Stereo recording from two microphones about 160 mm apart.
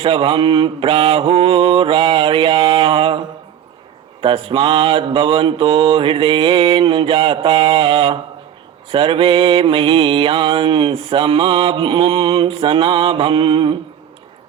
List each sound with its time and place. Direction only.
0.0 s mantra: 35° right (ahead or behind)